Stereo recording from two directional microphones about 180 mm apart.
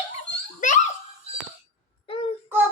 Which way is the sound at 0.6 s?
45° left (ahead or behind).